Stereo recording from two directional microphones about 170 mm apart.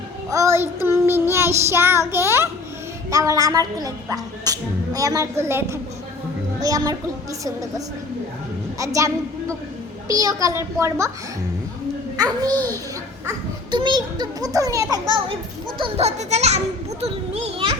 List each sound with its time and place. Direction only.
0.3 s child singing: 20° right (ahead or behind)
3.1 s a woman's voice: 20° right (ahead or behind)
8.8 s a woman's voice: 20° right (ahead or behind)
12.1 s a child's voice: 20° right (ahead or behind)
13.7 s a woman's voice: 25° right (ahead or behind)
15.8 s a child's voice: 40° right (ahead or behind)